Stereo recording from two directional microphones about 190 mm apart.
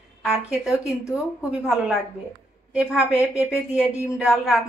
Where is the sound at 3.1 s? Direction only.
15° left (ahead or behind).